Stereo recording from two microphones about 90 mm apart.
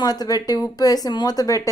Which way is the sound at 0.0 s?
45° left (ahead or behind).